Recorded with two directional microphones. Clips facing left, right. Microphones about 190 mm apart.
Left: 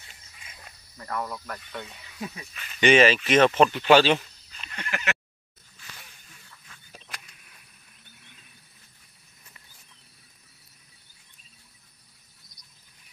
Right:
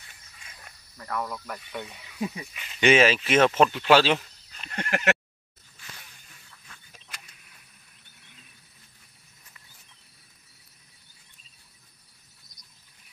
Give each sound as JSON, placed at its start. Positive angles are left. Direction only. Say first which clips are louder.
{"t": 0.9, "sound": "speech", "louder": "even", "side_deg": 0}
{"t": 4.6, "sound": "fowl", "louder": "right 5 dB", "side_deg": -50}